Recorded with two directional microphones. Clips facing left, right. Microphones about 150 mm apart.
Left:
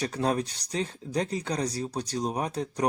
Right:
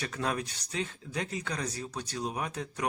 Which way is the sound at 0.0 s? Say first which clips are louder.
Left 6 dB; 35° left (ahead or behind).